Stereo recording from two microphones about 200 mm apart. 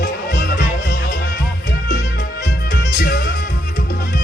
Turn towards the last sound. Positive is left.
turn(degrees=55)  # may be behind; listen again after turning